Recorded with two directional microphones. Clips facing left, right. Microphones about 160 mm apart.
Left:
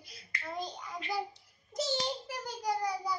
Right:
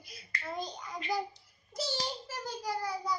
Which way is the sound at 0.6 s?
Centre (ahead or behind).